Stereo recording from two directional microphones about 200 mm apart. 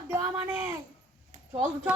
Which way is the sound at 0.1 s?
10° right (ahead or behind).